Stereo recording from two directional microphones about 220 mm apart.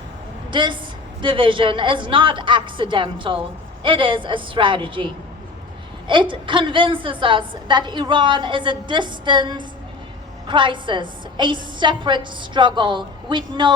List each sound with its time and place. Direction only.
0.5 s a woman's voice: 20° right (ahead or behind)
6.1 s a woman's voice: 20° right (ahead or behind)